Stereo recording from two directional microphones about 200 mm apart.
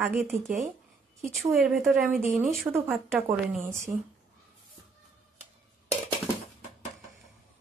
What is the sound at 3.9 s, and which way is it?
Speech, 10° right (ahead or behind).